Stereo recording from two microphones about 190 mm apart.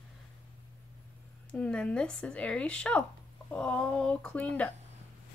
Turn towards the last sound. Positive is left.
turn(degrees=5)  # may be behind; listen again after turning